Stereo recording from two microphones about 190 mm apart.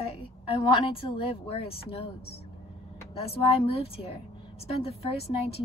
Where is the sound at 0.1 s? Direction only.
30° left (ahead or behind).